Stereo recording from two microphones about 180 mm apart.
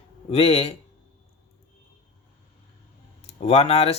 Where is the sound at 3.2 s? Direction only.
35° left (ahead or behind).